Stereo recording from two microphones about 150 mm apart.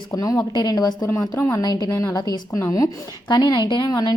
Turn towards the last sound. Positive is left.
turn(degrees=25)  # may be behind; listen again after turning